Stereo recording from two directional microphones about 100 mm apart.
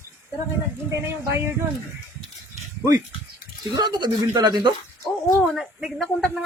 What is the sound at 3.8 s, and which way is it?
Speech, 50° right (ahead or behind).